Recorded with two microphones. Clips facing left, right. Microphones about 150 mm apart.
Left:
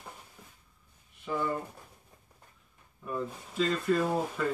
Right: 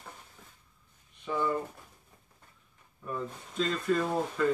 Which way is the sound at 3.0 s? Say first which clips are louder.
Left 1 dB; 5° left (ahead or behind).